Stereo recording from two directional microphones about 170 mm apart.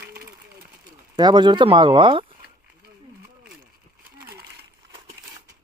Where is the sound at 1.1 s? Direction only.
25° right (ahead or behind).